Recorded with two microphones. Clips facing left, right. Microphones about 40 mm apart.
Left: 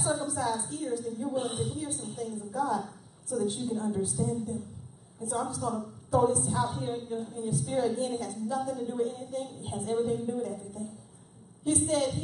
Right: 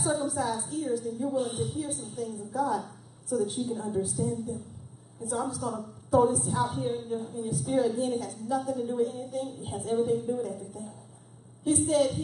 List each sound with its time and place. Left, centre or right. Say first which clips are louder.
0.0 s a woman's voice: right 1 dB; centre
1.3 s a woman's voice: right 1 dB; left
1.6 s a woman's voice: right 2 dB; centre
2.7 s a sound: even; centre
3.4 s a woman's voice: left 1 dB; centre